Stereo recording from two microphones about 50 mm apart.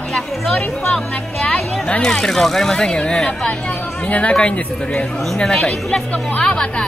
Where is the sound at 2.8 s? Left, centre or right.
Centre.